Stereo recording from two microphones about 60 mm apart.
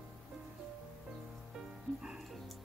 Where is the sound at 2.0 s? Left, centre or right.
Centre.